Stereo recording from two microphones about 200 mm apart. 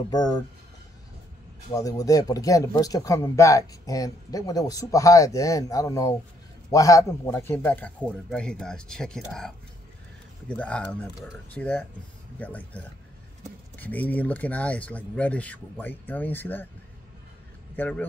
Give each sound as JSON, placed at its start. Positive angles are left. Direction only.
{"t": 0.1, "sound": "speech", "side_deg": 20}
{"t": 1.7, "sound": "a man's voice", "side_deg": 15}
{"t": 10.5, "sound": "speech", "side_deg": 5}
{"t": 17.7, "sound": "speech", "side_deg": 5}